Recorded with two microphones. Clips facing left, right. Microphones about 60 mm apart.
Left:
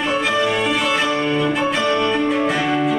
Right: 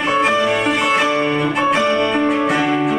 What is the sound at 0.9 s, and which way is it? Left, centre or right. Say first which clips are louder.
Violin: right 2 dB; right.